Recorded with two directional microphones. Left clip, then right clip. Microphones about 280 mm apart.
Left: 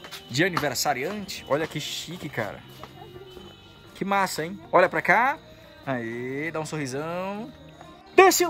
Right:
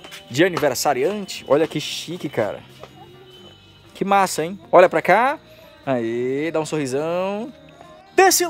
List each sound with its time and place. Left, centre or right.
0.3 s speech: centre
4.0 s speech: right
8.2 s speech: centre